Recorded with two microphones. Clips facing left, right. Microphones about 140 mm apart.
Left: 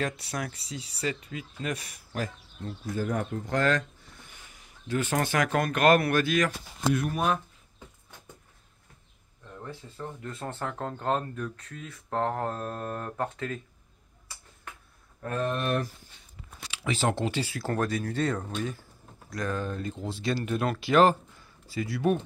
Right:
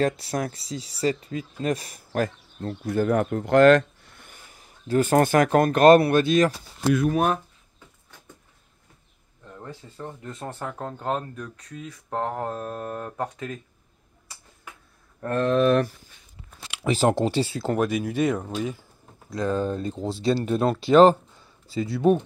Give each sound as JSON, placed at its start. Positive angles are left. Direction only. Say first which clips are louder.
{"t": 0.0, "sound": "speech", "louder": "right 8 dB", "side_deg": -40}
{"t": 2.1, "sound": "speech", "louder": "right 8 dB", "side_deg": -60}
{"t": 4.6, "sound": "speech", "louder": "right 8 dB", "side_deg": -40}
{"t": 9.9, "sound": "speech", "louder": "right 2 dB", "side_deg": -15}
{"t": 15.2, "sound": "speech", "louder": "right 9 dB", "side_deg": -70}
{"t": 16.8, "sound": "speech", "louder": "right 7 dB", "side_deg": -40}
{"t": 19.3, "sound": "speech", "louder": "right 7 dB", "side_deg": -25}